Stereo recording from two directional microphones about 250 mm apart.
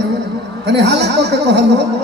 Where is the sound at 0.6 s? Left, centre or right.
Right.